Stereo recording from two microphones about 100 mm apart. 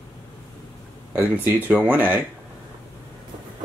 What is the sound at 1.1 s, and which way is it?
Speech, 20° right (ahead or behind).